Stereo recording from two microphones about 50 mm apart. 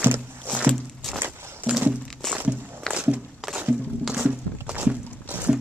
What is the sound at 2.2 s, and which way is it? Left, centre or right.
Walk, centre.